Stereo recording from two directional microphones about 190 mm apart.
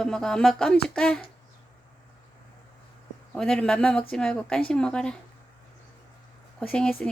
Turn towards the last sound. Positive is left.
turn(degrees=5)  # may be behind; listen again after turning